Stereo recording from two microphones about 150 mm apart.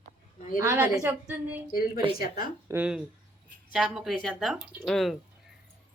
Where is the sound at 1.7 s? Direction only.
75° left (ahead or behind).